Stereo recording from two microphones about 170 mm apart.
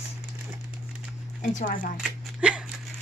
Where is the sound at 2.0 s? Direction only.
5° right (ahead or behind).